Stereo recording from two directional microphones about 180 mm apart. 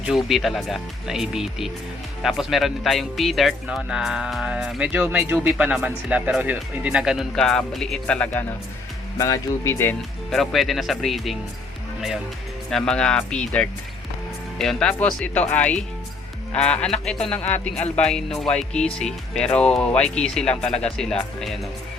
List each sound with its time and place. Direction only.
0.3 s speech: centre (ahead or behind)
9.1 s speech: 20° left (ahead or behind)
10.3 s speech: centre (ahead or behind)
16.8 s speech: 5° left (ahead or behind)